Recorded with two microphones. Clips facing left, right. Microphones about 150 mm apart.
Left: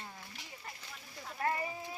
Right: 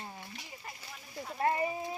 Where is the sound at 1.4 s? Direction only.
25° right (ahead or behind).